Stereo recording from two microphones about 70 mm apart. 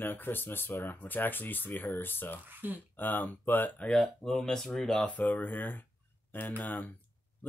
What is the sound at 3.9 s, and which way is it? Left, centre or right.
Speech, centre.